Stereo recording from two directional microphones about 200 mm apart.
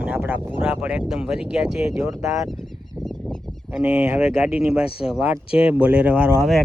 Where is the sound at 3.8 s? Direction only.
5° right (ahead or behind).